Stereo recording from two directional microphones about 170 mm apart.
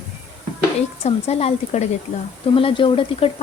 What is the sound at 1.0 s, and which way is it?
Speech, 40° left (ahead or behind).